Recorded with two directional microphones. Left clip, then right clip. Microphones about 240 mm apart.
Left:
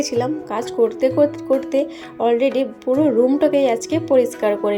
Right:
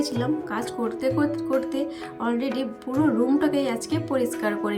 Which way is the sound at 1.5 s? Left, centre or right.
Centre.